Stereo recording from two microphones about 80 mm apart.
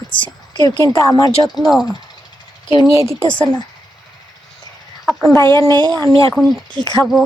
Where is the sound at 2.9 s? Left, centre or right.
Right.